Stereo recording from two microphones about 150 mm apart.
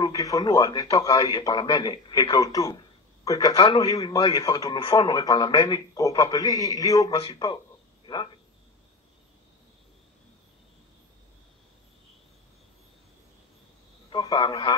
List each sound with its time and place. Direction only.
0.0 s a man's voice: 25° left (ahead or behind)
4.7 s a man's voice: 35° left (ahead or behind)
7.2 s a man's voice: 35° left (ahead or behind)
14.1 s a man's voice: 35° left (ahead or behind)